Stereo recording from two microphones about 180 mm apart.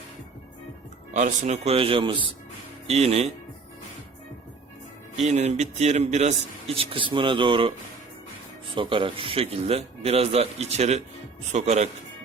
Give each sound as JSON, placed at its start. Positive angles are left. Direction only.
{"t": 1.1, "sound": "a man's voice", "side_deg": -40}
{"t": 5.1, "sound": "a man's voice", "side_deg": -40}
{"t": 8.7, "sound": "a man's voice", "side_deg": -30}